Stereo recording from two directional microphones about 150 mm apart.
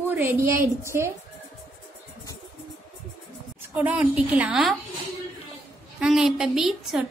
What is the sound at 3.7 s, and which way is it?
A woman's voice, 10° right (ahead or behind).